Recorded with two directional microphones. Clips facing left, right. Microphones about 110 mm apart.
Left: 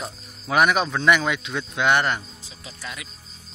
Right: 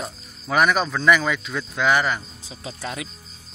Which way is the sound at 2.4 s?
30° right (ahead or behind).